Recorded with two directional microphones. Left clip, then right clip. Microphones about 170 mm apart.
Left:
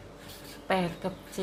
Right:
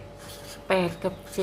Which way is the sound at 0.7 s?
15° right (ahead or behind).